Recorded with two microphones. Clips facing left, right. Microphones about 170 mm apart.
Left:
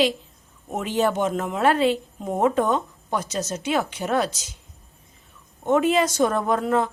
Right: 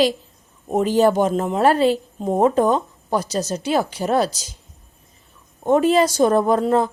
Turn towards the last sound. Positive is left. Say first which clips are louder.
# right 4 dB
turn(degrees=-35)  # may be behind; listen again after turning